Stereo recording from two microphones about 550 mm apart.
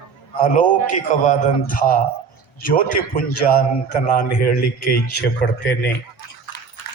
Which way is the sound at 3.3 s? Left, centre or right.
Left.